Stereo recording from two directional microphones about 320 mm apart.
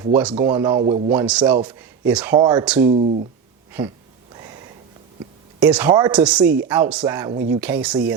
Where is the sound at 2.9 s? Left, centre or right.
Right.